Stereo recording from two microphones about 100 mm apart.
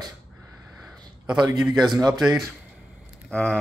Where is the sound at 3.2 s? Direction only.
10° left (ahead or behind).